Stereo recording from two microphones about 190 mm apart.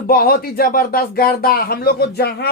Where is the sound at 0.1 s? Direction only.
50° left (ahead or behind).